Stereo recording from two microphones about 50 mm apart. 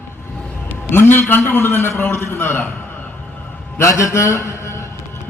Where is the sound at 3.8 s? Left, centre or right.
Left.